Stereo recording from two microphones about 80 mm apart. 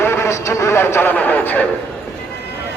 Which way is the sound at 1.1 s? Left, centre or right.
Centre.